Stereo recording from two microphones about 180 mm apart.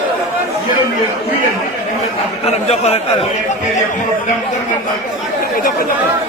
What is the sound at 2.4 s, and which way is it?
Speech, 35° left (ahead or behind).